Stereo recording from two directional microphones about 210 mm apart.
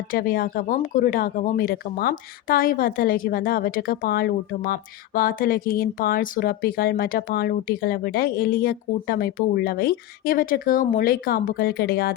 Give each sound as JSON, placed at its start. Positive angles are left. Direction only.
{"t": 0.1, "sound": "speech", "side_deg": 45}